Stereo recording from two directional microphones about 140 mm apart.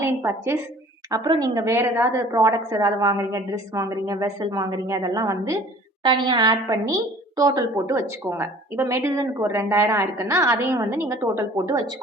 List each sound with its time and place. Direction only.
0.0 s a woman's voice: 15° right (ahead or behind)
6.0 s a woman's voice: 35° right (ahead or behind)